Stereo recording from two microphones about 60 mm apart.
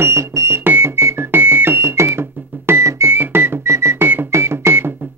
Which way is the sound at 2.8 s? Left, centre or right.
Right.